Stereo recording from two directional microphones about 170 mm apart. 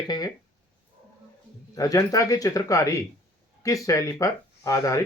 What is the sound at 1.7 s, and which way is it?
Speech, 20° left (ahead or behind).